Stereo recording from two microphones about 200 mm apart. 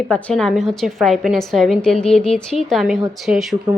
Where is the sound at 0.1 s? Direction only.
5° left (ahead or behind).